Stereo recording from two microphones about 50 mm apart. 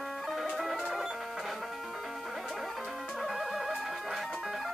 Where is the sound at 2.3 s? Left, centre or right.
Centre.